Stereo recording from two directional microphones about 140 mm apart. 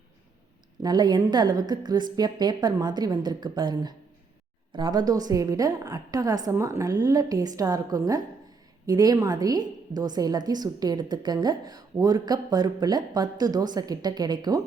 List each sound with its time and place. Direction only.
0.8 s a woman's voice: 30° right (ahead or behind)